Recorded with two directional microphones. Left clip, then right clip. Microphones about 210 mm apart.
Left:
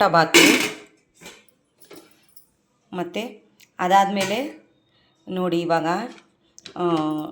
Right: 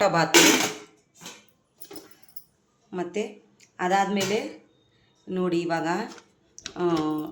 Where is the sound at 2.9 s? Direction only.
20° left (ahead or behind).